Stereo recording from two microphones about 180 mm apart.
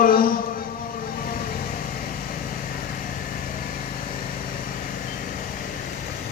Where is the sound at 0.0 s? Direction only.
50° left (ahead or behind).